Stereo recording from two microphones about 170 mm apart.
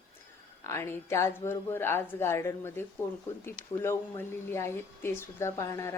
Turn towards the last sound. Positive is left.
turn(degrees=15)  # may be behind; listen again after turning